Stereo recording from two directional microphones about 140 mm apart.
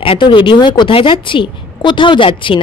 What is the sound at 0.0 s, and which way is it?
A woman's voice, 35° left (ahead or behind).